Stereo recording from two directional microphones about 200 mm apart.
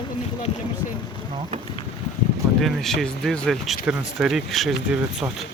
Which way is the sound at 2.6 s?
Centre (ahead or behind).